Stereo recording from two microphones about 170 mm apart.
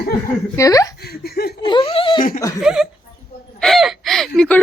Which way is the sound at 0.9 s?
65° left (ahead or behind).